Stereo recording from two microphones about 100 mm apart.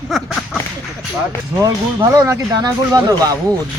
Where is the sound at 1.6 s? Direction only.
40° right (ahead or behind).